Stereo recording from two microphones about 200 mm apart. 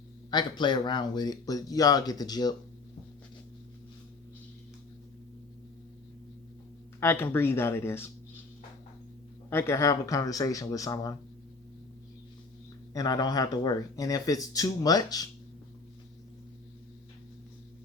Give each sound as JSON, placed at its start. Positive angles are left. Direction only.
{"t": 0.3, "sound": "speech", "side_deg": 20}
{"t": 7.0, "sound": "speech", "side_deg": 10}
{"t": 9.5, "sound": "speech", "side_deg": 10}
{"t": 12.9, "sound": "speech", "side_deg": 20}